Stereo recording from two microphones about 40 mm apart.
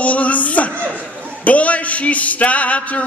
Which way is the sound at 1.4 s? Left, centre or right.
Left.